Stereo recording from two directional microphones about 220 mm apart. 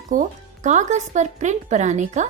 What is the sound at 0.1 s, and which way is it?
Speech, 35° right (ahead or behind).